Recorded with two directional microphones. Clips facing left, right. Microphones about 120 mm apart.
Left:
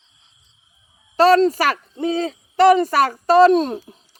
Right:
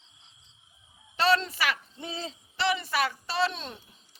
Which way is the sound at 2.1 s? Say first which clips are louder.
Left 14 dB; 60° left (ahead or behind).